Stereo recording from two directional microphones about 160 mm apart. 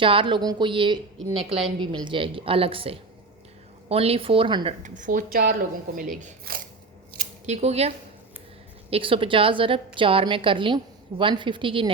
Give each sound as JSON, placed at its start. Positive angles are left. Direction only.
{"t": 0.0, "sound": "a woman's voice", "side_deg": -35}
{"t": 4.8, "sound": "speech", "side_deg": -55}
{"t": 6.0, "sound": "speech", "side_deg": -55}
{"t": 7.4, "sound": "a woman's voice", "side_deg": -45}